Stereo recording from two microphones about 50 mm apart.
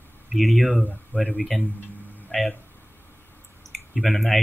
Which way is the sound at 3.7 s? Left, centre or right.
Centre.